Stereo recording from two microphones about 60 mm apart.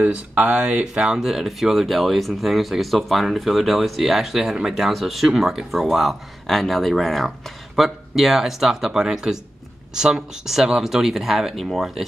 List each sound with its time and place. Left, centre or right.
0.0 s speech: right; by 12.1 s centre